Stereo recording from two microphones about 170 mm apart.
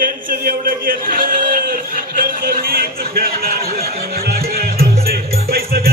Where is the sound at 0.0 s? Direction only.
55° right (ahead or behind).